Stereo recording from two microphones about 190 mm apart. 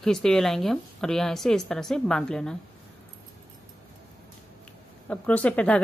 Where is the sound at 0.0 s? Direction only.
5° left (ahead or behind).